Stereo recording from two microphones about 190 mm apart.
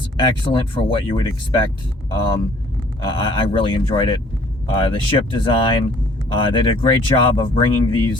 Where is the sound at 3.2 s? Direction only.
30° left (ahead or behind).